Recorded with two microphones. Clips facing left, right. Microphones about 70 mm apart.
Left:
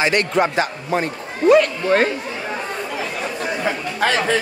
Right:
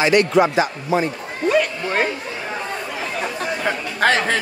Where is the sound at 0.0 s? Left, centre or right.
Left.